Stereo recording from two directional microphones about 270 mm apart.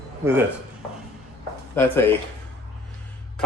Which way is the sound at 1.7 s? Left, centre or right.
Centre.